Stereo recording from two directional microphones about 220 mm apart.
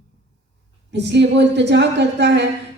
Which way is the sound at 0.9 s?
50° right (ahead or behind).